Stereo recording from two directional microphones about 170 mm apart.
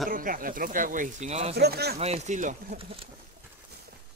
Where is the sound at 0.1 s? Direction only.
55° right (ahead or behind).